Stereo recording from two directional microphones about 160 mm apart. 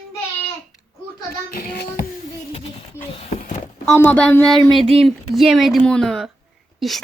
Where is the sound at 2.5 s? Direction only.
35° left (ahead or behind).